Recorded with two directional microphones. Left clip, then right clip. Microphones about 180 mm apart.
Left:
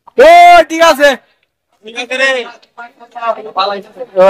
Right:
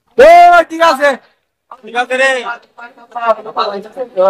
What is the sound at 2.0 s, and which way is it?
Speech, 25° right (ahead or behind).